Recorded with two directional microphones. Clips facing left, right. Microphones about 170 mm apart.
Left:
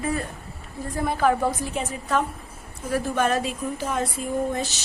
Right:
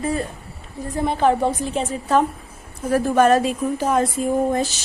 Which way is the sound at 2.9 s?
45° right (ahead or behind).